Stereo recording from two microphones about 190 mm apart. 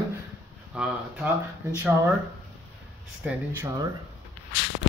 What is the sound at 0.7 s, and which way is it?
Speech, 5° right (ahead or behind).